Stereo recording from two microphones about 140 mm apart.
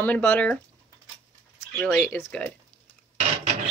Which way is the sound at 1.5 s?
5° left (ahead or behind).